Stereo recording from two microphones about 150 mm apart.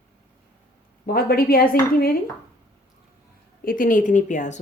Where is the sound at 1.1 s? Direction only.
85° left.